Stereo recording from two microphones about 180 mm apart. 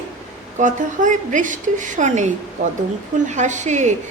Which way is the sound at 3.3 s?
40° right (ahead or behind).